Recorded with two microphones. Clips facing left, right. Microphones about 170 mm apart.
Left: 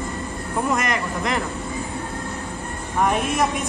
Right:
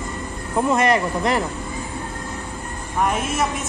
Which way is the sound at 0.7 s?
30° right (ahead or behind).